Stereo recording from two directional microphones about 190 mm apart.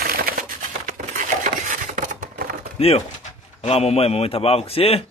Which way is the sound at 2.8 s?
30° left (ahead or behind).